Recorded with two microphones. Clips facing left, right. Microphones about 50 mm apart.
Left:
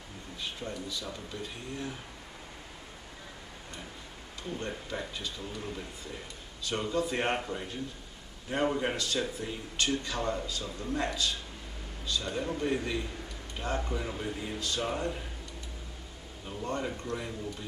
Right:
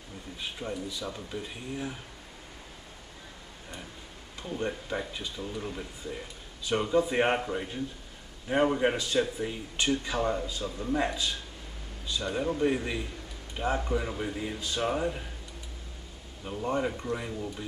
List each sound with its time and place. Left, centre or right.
0.4 s speech: centre
4.4 s speech: centre
16.4 s speech: centre